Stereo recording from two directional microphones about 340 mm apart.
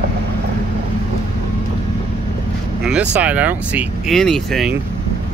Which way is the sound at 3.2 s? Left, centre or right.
Centre.